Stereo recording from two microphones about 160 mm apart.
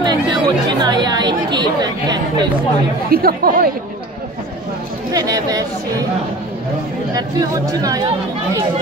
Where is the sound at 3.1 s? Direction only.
70° right (ahead or behind).